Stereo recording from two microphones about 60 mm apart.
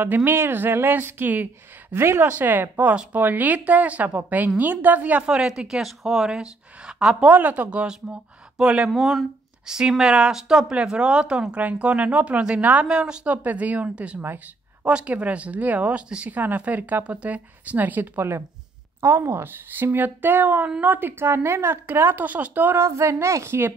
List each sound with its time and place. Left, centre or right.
0.0 s speech: right
2.0 s speech: right
2.2 s speech: right
5.6 s speech: centre
7.2 s speech: right
8.9 s speech: centre; by 14.2 s right
14.2 s speech: right
14.9 s speech: centre
18.9 s speech: right
22.8 s speech: right